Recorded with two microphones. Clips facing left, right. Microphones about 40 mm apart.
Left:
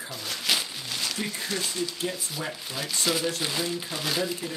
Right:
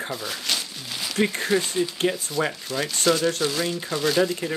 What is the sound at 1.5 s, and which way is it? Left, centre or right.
Speech, centre.